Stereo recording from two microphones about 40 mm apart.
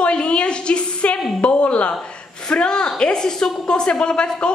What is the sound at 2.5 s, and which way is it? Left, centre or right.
A woman's voice, left.